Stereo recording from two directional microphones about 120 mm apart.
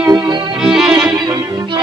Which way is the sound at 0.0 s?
10° right (ahead or behind).